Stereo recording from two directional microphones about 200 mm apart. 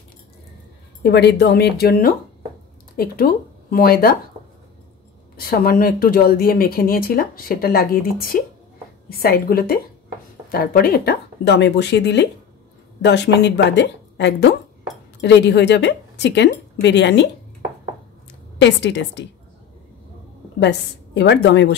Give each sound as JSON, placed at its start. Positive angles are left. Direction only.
{"t": 1.0, "sound": "a woman's voice", "side_deg": 55}
{"t": 5.3, "sound": "a woman's voice", "side_deg": 50}
{"t": 18.6, "sound": "a woman's voice", "side_deg": 60}
{"t": 20.5, "sound": "a woman's voice", "side_deg": 60}